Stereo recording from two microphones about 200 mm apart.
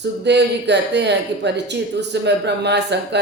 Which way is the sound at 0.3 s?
60° right (ahead or behind).